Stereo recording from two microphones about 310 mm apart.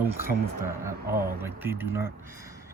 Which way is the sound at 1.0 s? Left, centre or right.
Right.